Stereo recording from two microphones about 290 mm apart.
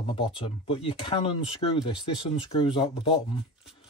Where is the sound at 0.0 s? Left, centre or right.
Centre.